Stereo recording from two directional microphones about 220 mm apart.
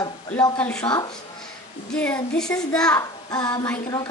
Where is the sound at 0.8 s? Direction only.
20° left (ahead or behind).